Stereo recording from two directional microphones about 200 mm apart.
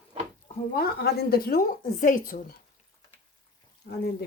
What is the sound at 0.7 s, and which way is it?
A woman's voice, 50° left (ahead or behind).